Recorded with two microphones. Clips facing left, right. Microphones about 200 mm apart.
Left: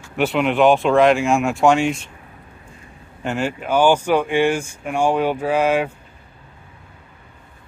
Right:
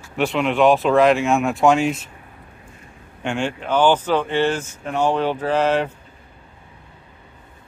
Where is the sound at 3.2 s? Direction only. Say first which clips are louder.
Left 1 dB; 5° left (ahead or behind).